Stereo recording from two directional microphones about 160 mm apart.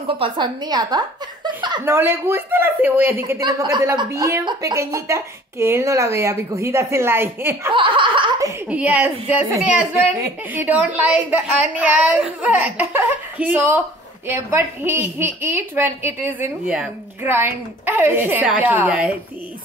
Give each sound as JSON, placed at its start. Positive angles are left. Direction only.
{"t": 0.2, "sound": "a woman's voice", "side_deg": -25}
{"t": 1.9, "sound": "a woman's voice", "side_deg": -15}
{"t": 7.7, "sound": "chuckle", "side_deg": -30}
{"t": 8.6, "sound": "a woman's voice", "side_deg": -10}